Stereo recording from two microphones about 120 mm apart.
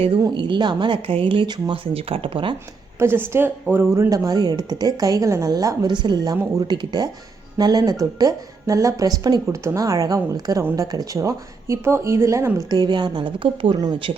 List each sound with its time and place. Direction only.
0.3 s speech: 40° right (ahead or behind)
3.0 s a woman's voice: 20° right (ahead or behind)
12.7 s speech: 35° right (ahead or behind)
13.7 s speech: 35° right (ahead or behind)